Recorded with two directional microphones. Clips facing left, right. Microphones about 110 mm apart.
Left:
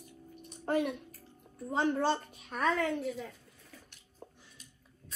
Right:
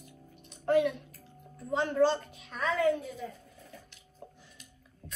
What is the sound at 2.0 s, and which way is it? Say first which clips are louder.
Speech: right 5 dB; 45° left (ahead or behind).